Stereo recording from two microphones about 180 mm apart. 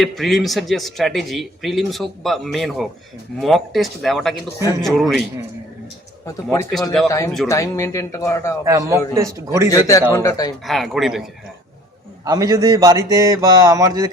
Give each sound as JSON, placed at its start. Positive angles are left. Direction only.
{"t": 0.0, "sound": "speech", "side_deg": 0}
{"t": 6.2, "sound": "speech", "side_deg": 15}
{"t": 8.6, "sound": "a man's voice", "side_deg": -15}
{"t": 9.6, "sound": "a man's voice", "side_deg": 20}
{"t": 10.6, "sound": "speech", "side_deg": 0}
{"t": 12.2, "sound": "speech", "side_deg": -20}